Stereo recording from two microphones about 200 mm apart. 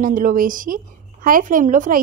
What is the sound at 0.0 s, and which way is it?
A woman's voice, 40° right (ahead or behind).